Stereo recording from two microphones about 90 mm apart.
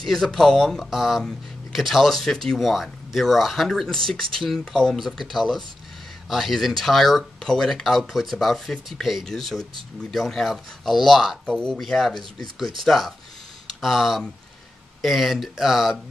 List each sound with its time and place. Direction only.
0.0 s speech: centre (ahead or behind)